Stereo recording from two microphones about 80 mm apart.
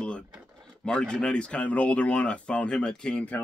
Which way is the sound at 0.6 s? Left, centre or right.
Centre.